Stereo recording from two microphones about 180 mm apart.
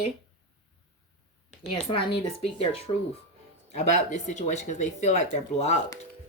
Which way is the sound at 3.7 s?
40° left (ahead or behind).